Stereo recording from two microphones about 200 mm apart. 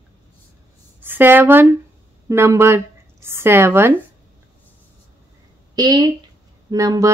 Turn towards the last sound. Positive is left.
turn(degrees=-15)  # may be behind; listen again after turning